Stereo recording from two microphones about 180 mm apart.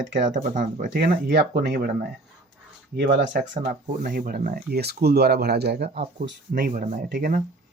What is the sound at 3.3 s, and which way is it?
Speech, 45° right (ahead or behind).